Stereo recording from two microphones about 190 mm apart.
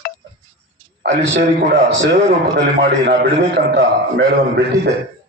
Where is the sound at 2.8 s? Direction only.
60° right (ahead or behind).